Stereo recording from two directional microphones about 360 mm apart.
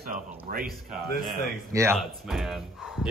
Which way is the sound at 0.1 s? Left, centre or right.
Right.